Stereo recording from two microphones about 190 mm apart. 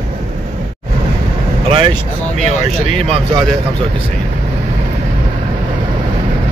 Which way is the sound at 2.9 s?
30° right (ahead or behind).